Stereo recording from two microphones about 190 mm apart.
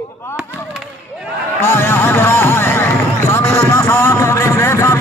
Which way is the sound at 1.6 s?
10° left (ahead or behind).